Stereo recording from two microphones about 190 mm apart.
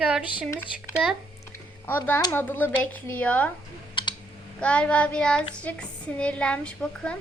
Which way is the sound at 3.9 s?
25° left (ahead or behind).